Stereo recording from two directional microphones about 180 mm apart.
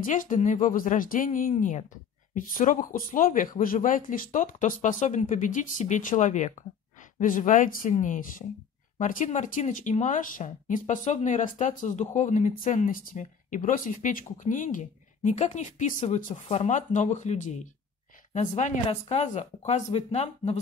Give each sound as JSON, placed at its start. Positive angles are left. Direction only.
{"t": 0.0, "sound": "speech", "side_deg": 45}
{"t": 18.6, "sound": "speech", "side_deg": 40}